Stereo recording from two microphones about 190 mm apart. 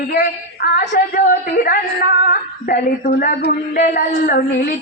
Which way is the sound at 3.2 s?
45° left (ahead or behind).